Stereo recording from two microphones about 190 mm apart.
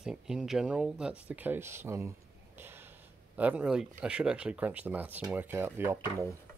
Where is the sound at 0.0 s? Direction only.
5° right (ahead or behind).